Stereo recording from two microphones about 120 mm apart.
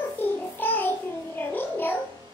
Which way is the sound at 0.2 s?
15° left (ahead or behind).